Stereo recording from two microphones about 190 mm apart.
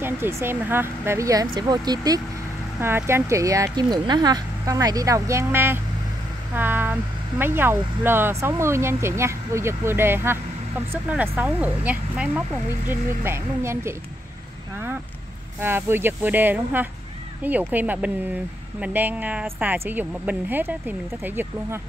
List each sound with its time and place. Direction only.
0.0 s speech: 15° right (ahead or behind)
15.6 s speech: 10° right (ahead or behind)